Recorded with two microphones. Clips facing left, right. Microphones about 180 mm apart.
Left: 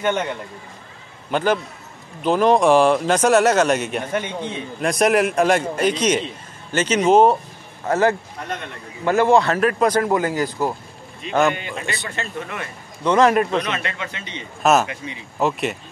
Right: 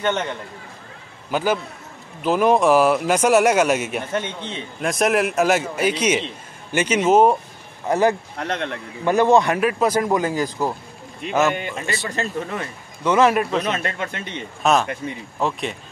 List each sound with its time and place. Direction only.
0.0 s a man's voice: 10° left (ahead or behind)
1.3 s speech: 5° right (ahead or behind)
4.1 s a man's voice: 10° left (ahead or behind)
4.8 s a man's voice: centre (ahead or behind)
8.4 s a man's voice: 75° right (ahead or behind)
9.0 s speech: 20° right (ahead or behind)
11.2 s a man's voice: 5° right (ahead or behind)
11.5 s a man's voice: 50° right (ahead or behind)
12.1 s speech: 35° right (ahead or behind)
13.0 s a man's voice: 10° right (ahead or behind)
13.7 s a man's voice: 45° right (ahead or behind)
14.6 s a man's voice: 5° left (ahead or behind)